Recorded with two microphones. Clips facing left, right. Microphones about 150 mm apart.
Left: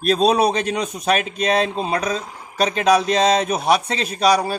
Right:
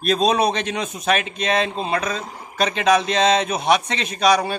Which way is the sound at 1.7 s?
10° left (ahead or behind).